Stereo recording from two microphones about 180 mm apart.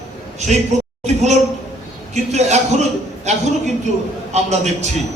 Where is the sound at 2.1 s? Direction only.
40° right (ahead or behind).